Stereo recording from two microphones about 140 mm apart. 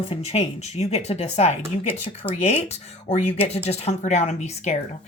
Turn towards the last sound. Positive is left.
turn(degrees=55)  # may be behind; listen again after turning